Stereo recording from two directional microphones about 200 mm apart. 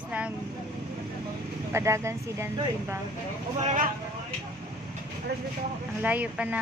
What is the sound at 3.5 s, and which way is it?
Speech, 40° right (ahead or behind).